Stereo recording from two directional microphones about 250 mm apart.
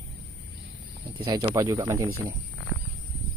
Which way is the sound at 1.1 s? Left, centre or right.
Centre.